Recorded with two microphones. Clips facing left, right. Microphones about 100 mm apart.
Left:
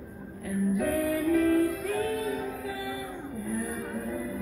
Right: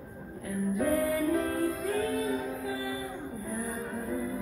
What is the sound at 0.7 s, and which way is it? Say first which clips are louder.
Music: right 2 dB; 25° right (ahead or behind).